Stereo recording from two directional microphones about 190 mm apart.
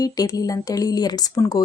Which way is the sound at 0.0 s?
20° left (ahead or behind).